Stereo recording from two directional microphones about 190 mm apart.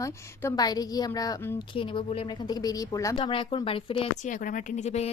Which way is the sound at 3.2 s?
30° left (ahead or behind).